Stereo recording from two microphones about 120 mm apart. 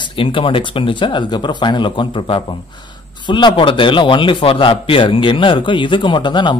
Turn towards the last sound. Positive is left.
turn(degrees=40)  # may be behind; listen again after turning